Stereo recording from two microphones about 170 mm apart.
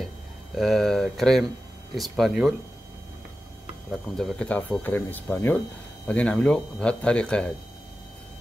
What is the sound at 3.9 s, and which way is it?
Speech, 5° left (ahead or behind).